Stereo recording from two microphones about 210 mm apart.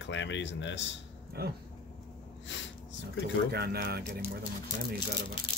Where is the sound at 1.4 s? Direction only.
50° right (ahead or behind).